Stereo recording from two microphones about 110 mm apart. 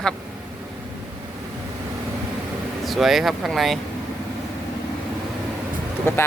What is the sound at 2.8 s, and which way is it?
Speech, centre (ahead or behind).